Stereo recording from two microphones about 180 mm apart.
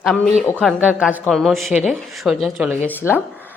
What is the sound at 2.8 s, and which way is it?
Speech, 10° left (ahead or behind).